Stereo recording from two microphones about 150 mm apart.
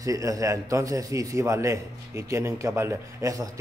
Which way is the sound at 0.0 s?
20° right (ahead or behind).